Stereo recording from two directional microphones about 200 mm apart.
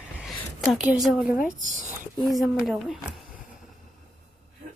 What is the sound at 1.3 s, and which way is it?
Speech, 40° left (ahead or behind).